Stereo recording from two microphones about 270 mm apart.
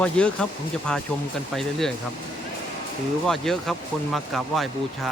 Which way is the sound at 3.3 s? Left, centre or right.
Centre.